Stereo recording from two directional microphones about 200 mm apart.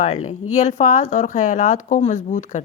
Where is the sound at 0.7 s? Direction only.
40° left (ahead or behind).